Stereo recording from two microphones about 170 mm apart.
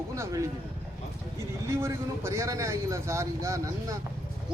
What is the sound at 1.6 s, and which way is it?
Speech, 15° right (ahead or behind).